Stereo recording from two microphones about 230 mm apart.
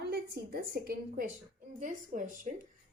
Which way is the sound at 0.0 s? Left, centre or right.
Right.